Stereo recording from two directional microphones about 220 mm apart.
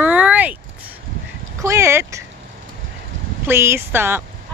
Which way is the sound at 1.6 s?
10° right (ahead or behind).